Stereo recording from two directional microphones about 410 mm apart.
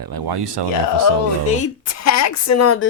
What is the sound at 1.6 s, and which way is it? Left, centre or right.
A woman's voice, left.